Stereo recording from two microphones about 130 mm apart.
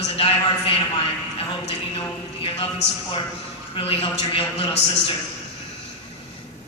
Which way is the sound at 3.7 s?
45° left (ahead or behind).